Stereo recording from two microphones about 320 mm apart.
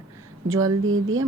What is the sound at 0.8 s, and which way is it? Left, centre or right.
Speech, right.